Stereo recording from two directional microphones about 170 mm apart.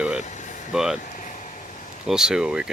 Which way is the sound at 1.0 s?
50° left (ahead or behind).